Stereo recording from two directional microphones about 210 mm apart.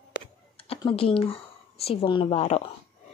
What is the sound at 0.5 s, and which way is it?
A woman's voice, 25° left (ahead or behind).